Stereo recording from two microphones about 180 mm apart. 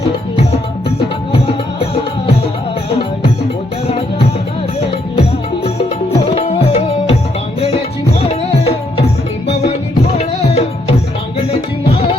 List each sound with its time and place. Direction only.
0.5 s music: 30° left (ahead or behind)
3.8 s music: 35° left (ahead or behind)
5.6 s music: 35° left (ahead or behind)
8.2 s music: 35° left (ahead or behind)
10.2 s music: 35° left (ahead or behind)